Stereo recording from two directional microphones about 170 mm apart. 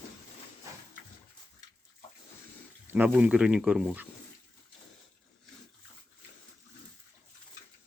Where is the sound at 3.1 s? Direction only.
5° right (ahead or behind).